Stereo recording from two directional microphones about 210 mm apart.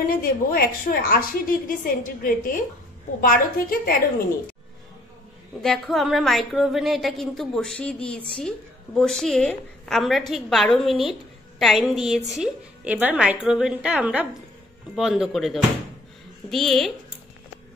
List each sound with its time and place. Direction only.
0.0 s a woman's voice: 45° left (ahead or behind)
5.6 s a woman's voice: centre (ahead or behind)